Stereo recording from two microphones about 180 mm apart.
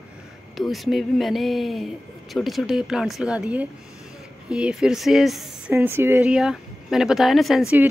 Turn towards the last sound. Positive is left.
turn(degrees=0)  # may be behind; listen again after turning